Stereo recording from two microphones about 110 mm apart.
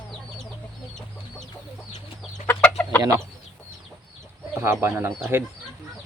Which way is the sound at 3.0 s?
30° right (ahead or behind).